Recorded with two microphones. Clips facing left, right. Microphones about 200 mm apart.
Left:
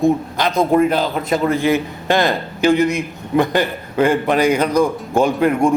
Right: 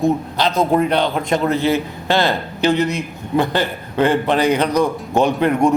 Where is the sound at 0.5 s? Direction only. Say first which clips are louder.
Left 2 dB; 5° left (ahead or behind).